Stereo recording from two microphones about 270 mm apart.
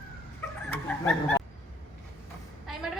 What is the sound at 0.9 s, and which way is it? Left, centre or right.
Snicker, centre.